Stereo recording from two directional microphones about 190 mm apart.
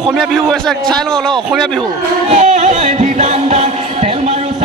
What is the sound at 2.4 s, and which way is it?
Music, 40° right (ahead or behind).